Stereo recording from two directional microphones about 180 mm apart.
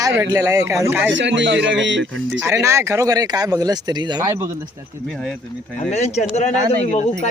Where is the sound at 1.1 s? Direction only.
90° right.